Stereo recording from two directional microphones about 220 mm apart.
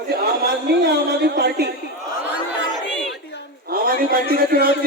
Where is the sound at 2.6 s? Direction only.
55° left (ahead or behind).